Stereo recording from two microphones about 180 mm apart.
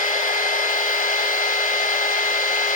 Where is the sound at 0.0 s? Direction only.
45° left (ahead or behind).